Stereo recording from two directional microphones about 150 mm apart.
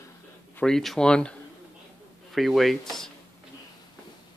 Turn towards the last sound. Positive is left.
turn(degrees=0)  # may be behind; listen again after turning